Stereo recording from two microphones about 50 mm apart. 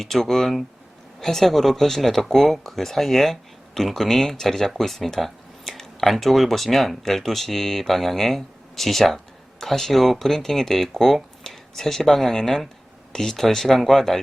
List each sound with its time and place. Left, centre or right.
0.0 s speech: centre